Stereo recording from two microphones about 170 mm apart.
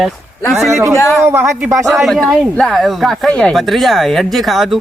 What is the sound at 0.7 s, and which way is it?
Speech, 15° right (ahead or behind).